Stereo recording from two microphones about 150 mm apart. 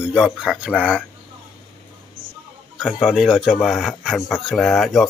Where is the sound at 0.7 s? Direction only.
10° left (ahead or behind).